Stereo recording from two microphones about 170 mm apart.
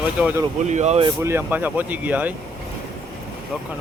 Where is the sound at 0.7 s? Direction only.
40° right (ahead or behind).